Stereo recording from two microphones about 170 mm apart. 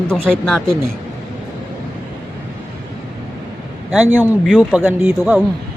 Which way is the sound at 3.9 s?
10° right (ahead or behind).